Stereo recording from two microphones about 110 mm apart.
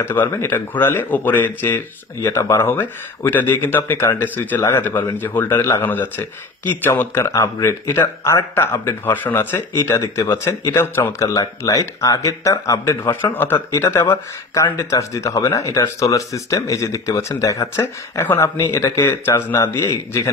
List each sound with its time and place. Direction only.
0.0 s speech: 20° left (ahead or behind)